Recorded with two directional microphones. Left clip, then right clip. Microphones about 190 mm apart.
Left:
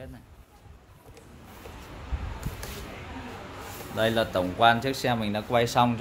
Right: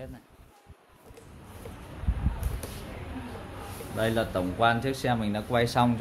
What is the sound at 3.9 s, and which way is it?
Speech, 10° left (ahead or behind).